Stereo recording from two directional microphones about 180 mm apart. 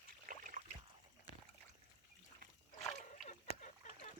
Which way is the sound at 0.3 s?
50° right (ahead or behind).